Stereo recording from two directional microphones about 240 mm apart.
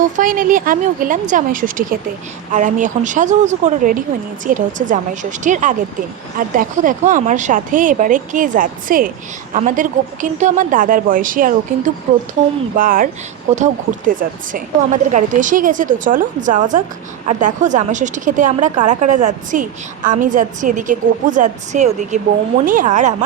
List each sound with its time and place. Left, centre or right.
0.2 s speech: right